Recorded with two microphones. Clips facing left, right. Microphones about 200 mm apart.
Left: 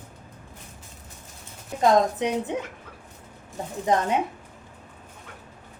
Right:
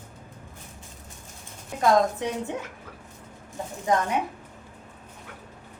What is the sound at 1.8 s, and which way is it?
Speech, 20° left (ahead or behind).